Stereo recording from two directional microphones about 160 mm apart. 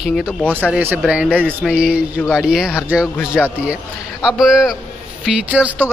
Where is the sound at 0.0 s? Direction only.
Centre (ahead or behind).